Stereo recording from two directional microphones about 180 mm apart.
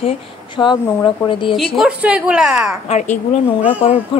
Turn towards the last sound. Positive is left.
turn(degrees=30)  # may be behind; listen again after turning